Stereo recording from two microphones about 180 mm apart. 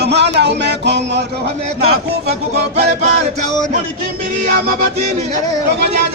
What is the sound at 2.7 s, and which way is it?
Music, 40° right (ahead or behind).